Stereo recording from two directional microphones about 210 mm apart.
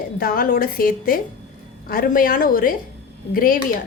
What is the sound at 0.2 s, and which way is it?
A woman's voice, 45° left (ahead or behind).